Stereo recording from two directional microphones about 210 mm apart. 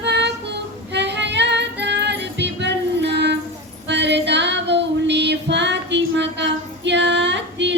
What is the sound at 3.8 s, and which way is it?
Child singing, 55° right (ahead or behind).